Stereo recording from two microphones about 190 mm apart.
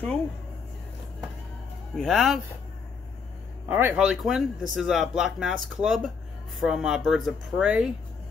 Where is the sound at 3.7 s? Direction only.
10° right (ahead or behind).